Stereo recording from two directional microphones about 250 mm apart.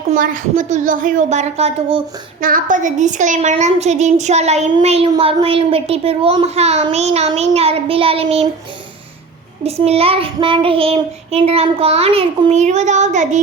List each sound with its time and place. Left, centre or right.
0.1 s a woman's voice: right
9.6 s a woman's voice: right